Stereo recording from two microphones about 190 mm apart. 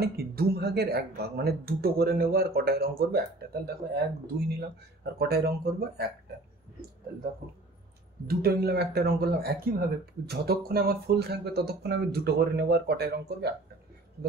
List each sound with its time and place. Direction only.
0.0 s speech: 55° right (ahead or behind)
7.4 s speech: 50° right (ahead or behind)